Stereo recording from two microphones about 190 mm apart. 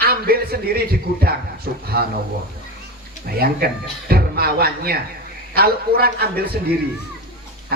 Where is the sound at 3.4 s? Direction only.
55° right (ahead or behind).